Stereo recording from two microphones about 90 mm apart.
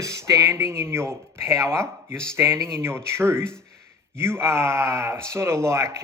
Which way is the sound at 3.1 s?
30° right (ahead or behind).